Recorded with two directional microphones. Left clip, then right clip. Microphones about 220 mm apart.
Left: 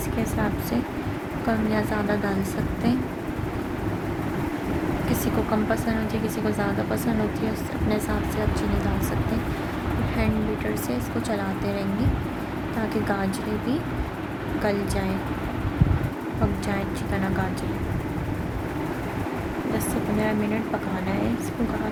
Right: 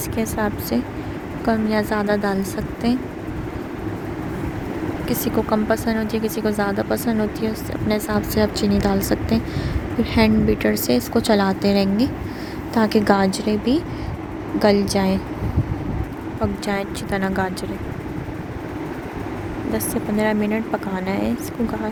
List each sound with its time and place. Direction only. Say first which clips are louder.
1.5 s speech: right 5 dB; 35° right (ahead or behind)
5.0 s speech: right 7 dB; 35° right (ahead or behind)
10.2 s speech: right 12 dB; 35° right (ahead or behind)
16.6 s speech: right 4 dB; 40° right (ahead or behind)
19.9 s speech: right 6 dB; 40° right (ahead or behind)